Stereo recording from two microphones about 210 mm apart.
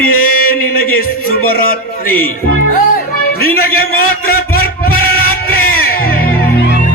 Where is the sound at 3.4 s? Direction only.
45° left (ahead or behind).